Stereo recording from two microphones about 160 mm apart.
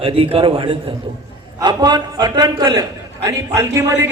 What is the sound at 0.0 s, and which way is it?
A man's voice, 35° right (ahead or behind).